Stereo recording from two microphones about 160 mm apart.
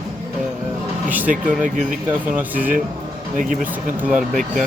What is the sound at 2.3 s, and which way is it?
Speech, 10° right (ahead or behind).